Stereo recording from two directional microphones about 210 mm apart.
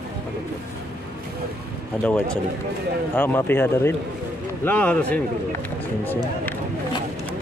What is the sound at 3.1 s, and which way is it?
A man's voice, 10° left (ahead or behind).